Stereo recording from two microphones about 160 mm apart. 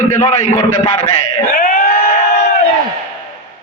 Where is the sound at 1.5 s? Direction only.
55° left (ahead or behind).